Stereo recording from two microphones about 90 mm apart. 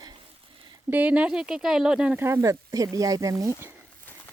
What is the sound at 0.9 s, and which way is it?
Speech, 15° right (ahead or behind).